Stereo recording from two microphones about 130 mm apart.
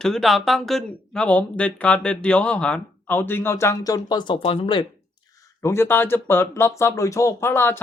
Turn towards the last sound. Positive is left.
turn(degrees=20)  # may be behind; listen again after turning